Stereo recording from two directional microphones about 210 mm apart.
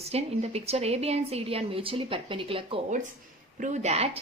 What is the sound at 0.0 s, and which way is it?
A woman's voice, 30° right (ahead or behind).